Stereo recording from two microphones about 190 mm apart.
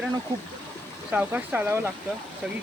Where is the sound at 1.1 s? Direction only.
10° right (ahead or behind).